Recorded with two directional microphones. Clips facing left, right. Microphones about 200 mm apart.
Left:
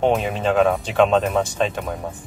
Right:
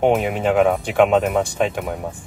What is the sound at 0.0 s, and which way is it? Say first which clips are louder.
Speech: right 2 dB; 15° right (ahead or behind).